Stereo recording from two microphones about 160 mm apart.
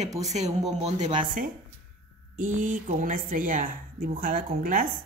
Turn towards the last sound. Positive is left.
turn(degrees=-60)  # may be behind; listen again after turning